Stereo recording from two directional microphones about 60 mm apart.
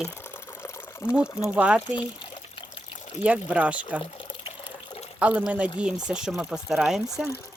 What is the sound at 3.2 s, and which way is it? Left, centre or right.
Speech, right.